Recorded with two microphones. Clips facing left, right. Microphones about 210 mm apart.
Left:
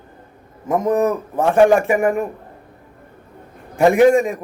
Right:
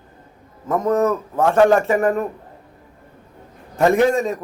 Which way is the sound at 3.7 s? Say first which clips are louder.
Left 4 dB; 15° left (ahead or behind).